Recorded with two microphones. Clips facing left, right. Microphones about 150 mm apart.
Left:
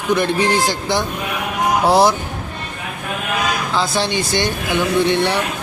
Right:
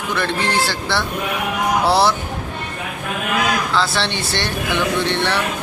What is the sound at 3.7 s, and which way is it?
Speech, 15° left (ahead or behind).